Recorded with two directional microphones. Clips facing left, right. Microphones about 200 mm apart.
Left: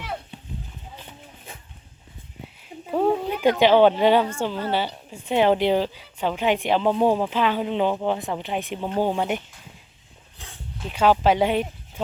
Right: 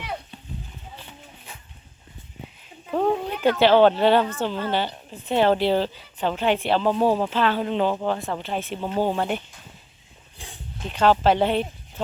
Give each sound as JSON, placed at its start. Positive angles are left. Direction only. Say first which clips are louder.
{"t": 2.9, "sound": "a woman's voice", "louder": "left 1 dB", "side_deg": 10}
{"t": 10.3, "sound": "a sound", "louder": "right 2 dB", "side_deg": -15}
{"t": 10.8, "sound": "a woman's voice", "louder": "even", "side_deg": 10}